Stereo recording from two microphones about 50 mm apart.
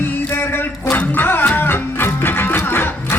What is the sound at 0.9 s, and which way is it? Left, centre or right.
Music, left.